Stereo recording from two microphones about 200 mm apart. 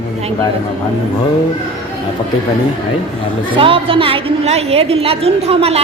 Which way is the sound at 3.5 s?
25° right (ahead or behind).